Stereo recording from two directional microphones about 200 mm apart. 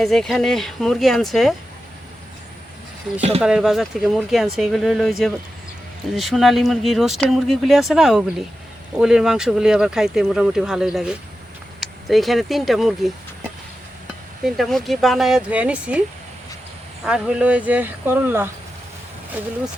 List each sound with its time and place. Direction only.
0.0 s speech: centre (ahead or behind)
3.2 s speech: 30° right (ahead or behind)
3.4 s speech: 5° right (ahead or behind)
14.4 s speech: centre (ahead or behind)
17.1 s speech: 5° right (ahead or behind)